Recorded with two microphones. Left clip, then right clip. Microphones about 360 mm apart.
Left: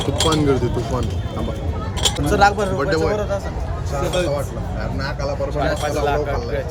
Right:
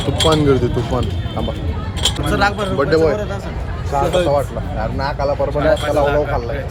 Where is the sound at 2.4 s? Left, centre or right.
Left.